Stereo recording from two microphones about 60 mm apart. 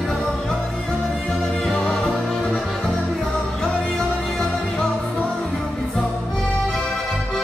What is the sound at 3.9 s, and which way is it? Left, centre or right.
Music, centre.